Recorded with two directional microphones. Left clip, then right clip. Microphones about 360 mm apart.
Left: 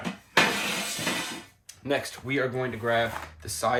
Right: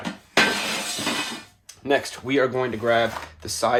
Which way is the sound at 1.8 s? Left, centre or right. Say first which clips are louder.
Right 6 dB; centre.